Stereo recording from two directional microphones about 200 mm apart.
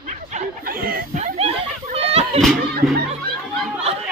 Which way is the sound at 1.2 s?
35° right (ahead or behind).